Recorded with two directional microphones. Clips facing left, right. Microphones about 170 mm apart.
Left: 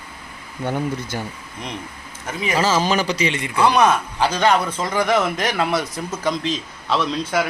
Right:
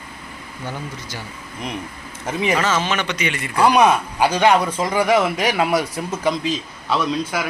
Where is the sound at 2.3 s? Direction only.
25° right (ahead or behind).